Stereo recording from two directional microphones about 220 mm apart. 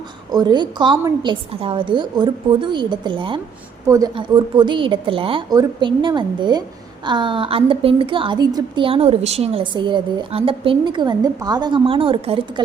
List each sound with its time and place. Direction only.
0.3 s a woman's voice: 20° right (ahead or behind)